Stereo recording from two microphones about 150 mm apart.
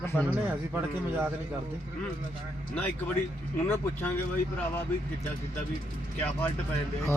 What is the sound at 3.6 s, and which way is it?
Speech, 15° left (ahead or behind).